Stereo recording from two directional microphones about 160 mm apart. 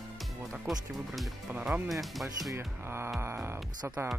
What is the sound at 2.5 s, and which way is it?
Speech, 15° right (ahead or behind).